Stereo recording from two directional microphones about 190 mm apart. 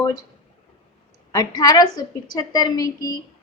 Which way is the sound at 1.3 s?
20° left (ahead or behind).